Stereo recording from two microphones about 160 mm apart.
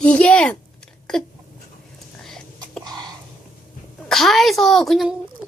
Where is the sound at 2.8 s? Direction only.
25° right (ahead or behind).